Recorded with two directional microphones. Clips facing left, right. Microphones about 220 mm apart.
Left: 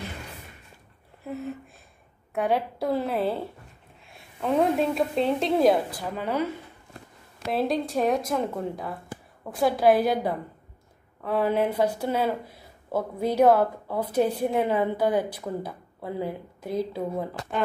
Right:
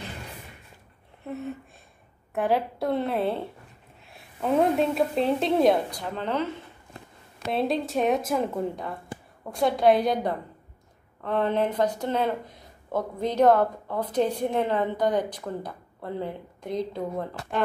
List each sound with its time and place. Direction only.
1.2 s a sound: centre (ahead or behind)
2.3 s speech: centre (ahead or behind)
7.4 s speech: centre (ahead or behind)